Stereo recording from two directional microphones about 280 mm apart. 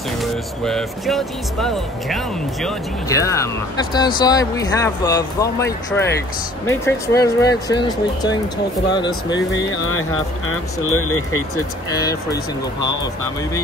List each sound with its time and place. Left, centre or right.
0.2 s speech: centre
3.1 s speech: centre
9.6 s speech: left
11.5 s speech: centre